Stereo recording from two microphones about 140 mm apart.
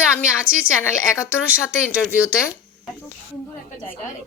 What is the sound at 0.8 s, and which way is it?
Speech, 20° left (ahead or behind).